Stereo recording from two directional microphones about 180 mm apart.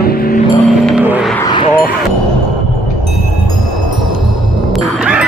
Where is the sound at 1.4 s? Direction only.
25° left (ahead or behind).